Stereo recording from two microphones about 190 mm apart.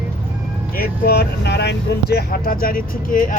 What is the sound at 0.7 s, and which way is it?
Speech, 55° left (ahead or behind).